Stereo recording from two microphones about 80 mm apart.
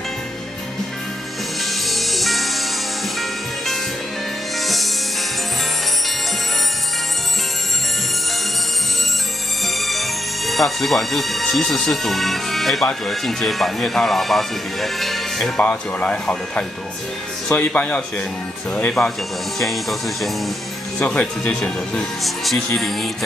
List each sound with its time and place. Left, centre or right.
1.6 s music: centre
9.8 s speech: centre
19.0 s speech: centre
21.0 s speech: centre
22.2 s speech: centre